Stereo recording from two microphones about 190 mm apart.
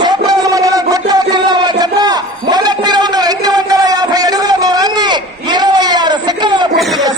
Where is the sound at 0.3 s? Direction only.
20° right (ahead or behind).